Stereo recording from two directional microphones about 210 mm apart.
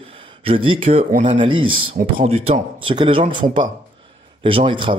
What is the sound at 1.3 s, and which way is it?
Speech, 25° right (ahead or behind).